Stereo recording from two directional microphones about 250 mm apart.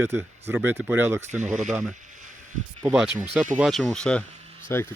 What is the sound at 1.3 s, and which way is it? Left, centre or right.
Speech, right.